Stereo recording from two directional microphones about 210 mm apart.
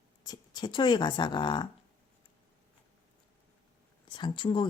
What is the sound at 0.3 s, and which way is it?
Speech, 20° left (ahead or behind).